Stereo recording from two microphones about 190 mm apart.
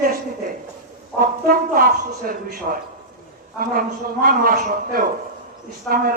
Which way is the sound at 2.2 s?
50° right (ahead or behind).